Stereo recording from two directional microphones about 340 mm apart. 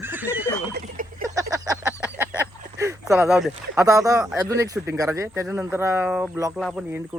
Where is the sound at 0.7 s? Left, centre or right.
Right.